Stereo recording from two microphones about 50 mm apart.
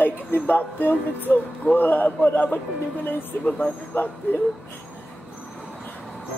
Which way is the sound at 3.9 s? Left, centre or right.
Left.